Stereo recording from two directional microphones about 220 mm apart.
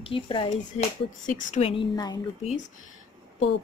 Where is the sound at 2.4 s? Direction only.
35° left (ahead or behind).